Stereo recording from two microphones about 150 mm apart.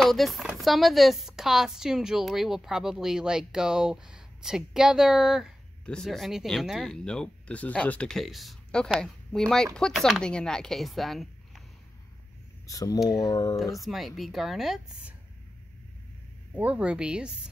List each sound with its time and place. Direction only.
0.0 s speech: centre (ahead or behind)
12.6 s speech: 25° left (ahead or behind)
13.8 s speech: centre (ahead or behind)
16.5 s speech: 10° right (ahead or behind)